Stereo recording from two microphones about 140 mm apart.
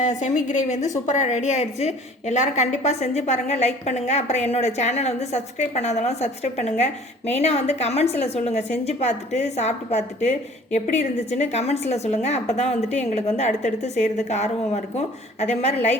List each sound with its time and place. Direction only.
0.0 s a woman's voice: 60° left (ahead or behind)